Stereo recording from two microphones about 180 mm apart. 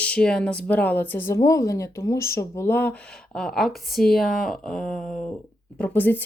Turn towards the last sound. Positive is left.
turn(degrees=10)  # may be behind; listen again after turning